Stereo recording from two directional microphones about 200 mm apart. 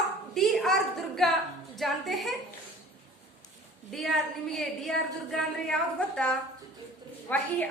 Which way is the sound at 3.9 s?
Centre (ahead or behind).